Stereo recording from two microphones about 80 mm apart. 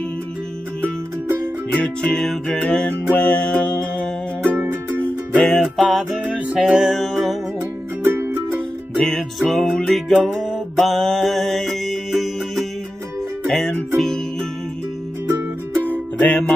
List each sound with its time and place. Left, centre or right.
1.7 s music: centre
4.4 s music: right
5.3 s music: centre
8.0 s music: right
8.9 s music: centre
15.2 s music: right
15.8 s music: left